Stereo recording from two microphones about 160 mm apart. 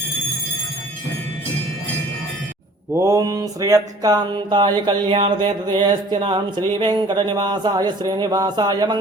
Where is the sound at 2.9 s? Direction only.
20° right (ahead or behind).